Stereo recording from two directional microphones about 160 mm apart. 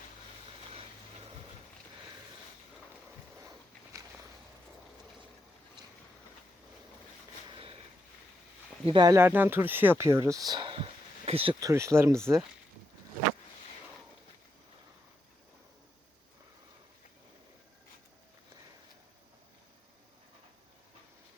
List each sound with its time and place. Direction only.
7.5 s a sound: 35° right (ahead or behind)
8.8 s speech: 30° right (ahead or behind)
9.1 s speech: 10° right (ahead or behind); by 11.5 s 35° right (ahead or behind)
11.6 s speech: 20° right (ahead or behind)